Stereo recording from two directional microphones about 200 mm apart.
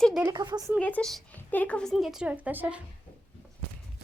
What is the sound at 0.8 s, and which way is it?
A woman's voice, 5° left (ahead or behind).